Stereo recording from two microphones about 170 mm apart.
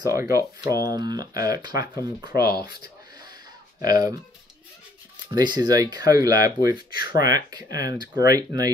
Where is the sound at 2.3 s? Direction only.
65° left (ahead or behind).